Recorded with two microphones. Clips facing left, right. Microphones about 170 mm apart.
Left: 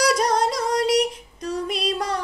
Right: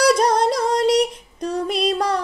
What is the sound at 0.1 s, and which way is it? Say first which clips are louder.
Singing: right 4 dB; 30° right (ahead or behind).